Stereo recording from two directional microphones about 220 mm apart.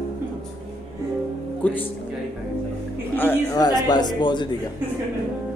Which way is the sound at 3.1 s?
10° left (ahead or behind).